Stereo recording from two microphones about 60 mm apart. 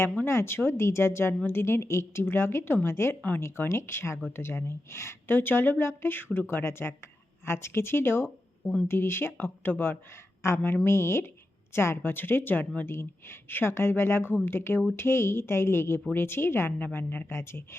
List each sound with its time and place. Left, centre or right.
0.3 s a woman's voice: left